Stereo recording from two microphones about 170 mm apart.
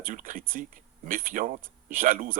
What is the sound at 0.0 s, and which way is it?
Speech, 50° right (ahead or behind).